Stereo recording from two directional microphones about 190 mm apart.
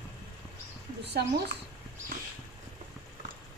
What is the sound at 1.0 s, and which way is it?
Speech, 60° right (ahead or behind).